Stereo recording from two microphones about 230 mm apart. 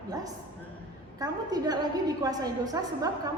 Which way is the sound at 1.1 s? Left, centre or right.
Centre.